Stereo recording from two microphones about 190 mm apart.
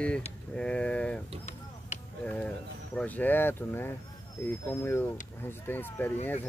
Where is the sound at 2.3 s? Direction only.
5° left (ahead or behind).